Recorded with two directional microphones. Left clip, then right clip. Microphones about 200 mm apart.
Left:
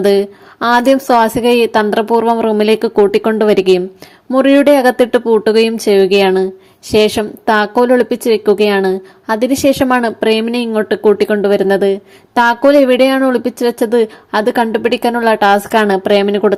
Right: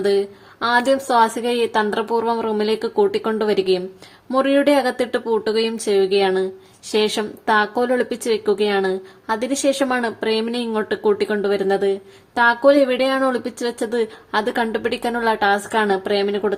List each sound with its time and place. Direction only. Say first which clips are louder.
0.0 s a woman's voice: left 7 dB; 35° left (ahead or behind)